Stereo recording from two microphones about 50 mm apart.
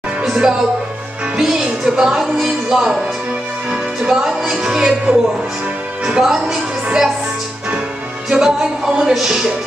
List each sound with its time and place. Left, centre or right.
0.2 s music: centre
1.4 s speech: centre
3.7 s music: centre
5.1 s speech: right
8.3 s speech: centre